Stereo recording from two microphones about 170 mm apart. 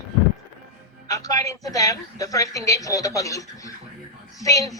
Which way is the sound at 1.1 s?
20° left (ahead or behind).